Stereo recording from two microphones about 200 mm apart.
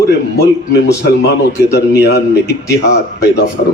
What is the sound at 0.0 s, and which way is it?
A man's voice, 60° left (ahead or behind).